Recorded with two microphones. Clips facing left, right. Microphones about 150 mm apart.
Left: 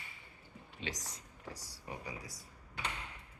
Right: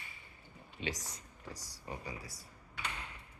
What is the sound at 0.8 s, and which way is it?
Speech, centre (ahead or behind).